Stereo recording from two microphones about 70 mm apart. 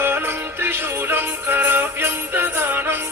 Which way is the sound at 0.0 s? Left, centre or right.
Right.